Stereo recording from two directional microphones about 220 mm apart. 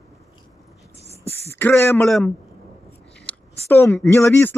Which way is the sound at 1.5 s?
10° left (ahead or behind).